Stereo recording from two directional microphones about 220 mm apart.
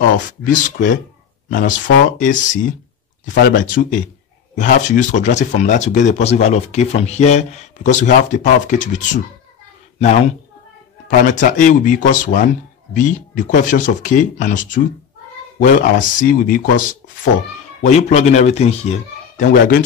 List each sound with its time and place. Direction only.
0.4 s speech: 35° left (ahead or behind)
17.8 s speech: 30° left (ahead or behind)